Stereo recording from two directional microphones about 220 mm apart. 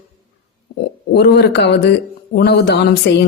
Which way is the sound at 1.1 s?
50° left (ahead or behind).